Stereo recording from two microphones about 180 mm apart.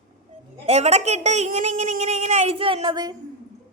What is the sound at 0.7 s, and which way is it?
A woman's voice, 35° right (ahead or behind).